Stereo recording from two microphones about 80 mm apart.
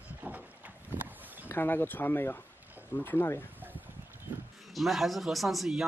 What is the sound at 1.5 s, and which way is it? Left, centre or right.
Speech, left.